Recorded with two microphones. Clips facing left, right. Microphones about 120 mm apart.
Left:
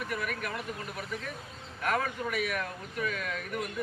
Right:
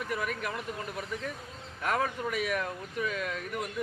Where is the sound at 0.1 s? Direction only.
25° right (ahead or behind).